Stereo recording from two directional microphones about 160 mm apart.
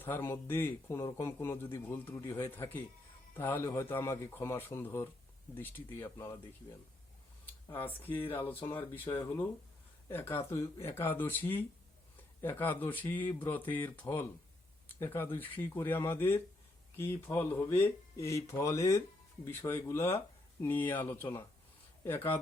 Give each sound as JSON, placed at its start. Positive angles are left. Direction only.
{"t": 0.0, "sound": "speech", "side_deg": 15}
{"t": 7.4, "sound": "speech", "side_deg": 10}